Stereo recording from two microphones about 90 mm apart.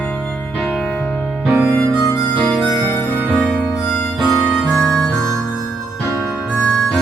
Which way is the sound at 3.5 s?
10° left (ahead or behind).